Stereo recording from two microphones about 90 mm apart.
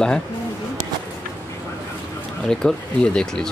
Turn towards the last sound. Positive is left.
turn(degrees=10)  # may be behind; listen again after turning